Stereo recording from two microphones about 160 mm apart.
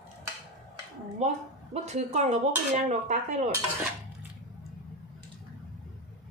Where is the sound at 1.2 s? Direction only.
45° right (ahead or behind).